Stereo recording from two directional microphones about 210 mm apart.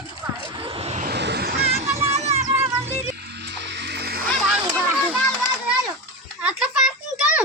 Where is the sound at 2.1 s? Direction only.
30° right (ahead or behind).